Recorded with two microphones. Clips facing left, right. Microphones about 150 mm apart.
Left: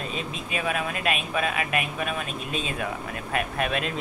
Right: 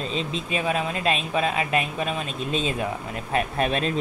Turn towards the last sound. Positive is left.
turn(degrees=-30)  # may be behind; listen again after turning